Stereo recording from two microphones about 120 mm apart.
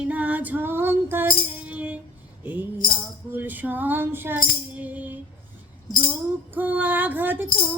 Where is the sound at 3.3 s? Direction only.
15° right (ahead or behind).